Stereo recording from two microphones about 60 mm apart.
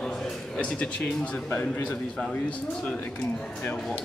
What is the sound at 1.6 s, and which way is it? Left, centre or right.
Speech, left.